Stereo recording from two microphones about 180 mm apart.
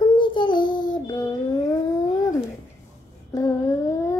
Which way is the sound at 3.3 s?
15° left (ahead or behind).